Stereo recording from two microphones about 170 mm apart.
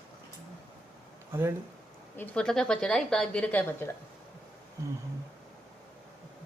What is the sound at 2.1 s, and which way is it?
A woman's voice, 10° left (ahead or behind).